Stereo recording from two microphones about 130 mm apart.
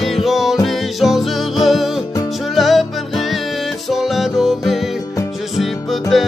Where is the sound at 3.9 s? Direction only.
Centre (ahead or behind).